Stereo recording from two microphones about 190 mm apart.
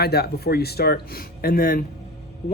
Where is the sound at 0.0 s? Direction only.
55° left (ahead or behind).